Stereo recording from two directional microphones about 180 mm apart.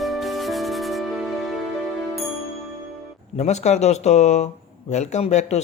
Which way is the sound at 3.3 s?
40° left (ahead or behind).